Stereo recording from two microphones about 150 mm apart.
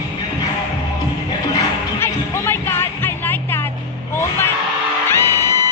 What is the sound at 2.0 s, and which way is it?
Music, 15° left (ahead or behind).